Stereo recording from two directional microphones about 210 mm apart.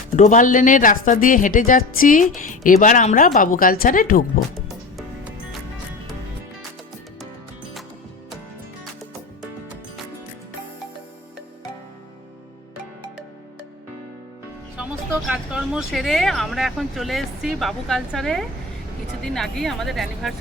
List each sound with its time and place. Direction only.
0.2 s speech: 35° left (ahead or behind)
4.7 s music: centre (ahead or behind)
14.8 s speech: 5° right (ahead or behind)